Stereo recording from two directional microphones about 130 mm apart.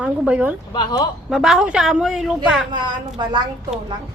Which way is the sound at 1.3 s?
5° right (ahead or behind).